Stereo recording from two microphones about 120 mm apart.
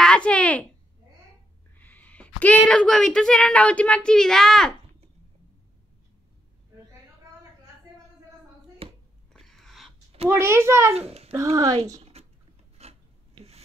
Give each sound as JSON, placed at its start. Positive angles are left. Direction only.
{"t": 0.0, "sound": "speech", "side_deg": 10}
{"t": 1.8, "sound": "speech", "side_deg": 15}
{"t": 8.8, "sound": "a sound", "side_deg": -50}
{"t": 9.3, "sound": "a sound", "side_deg": 5}
{"t": 10.3, "sound": "a child's voice", "side_deg": -20}
{"t": 11.0, "sound": "a child's voice", "side_deg": -60}
{"t": 11.3, "sound": "a child's voice", "side_deg": -30}
{"t": 12.0, "sound": "typing", "side_deg": -60}
{"t": 12.8, "sound": "filing", "side_deg": -60}